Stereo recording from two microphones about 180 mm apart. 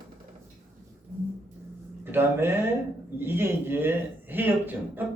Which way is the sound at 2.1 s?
10° right (ahead or behind).